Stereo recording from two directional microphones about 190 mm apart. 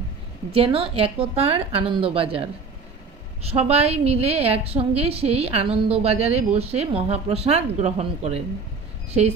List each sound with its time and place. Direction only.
0.5 s a woman's voice: 30° right (ahead or behind)